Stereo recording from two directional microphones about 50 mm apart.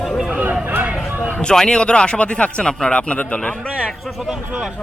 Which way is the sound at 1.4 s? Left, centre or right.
Centre.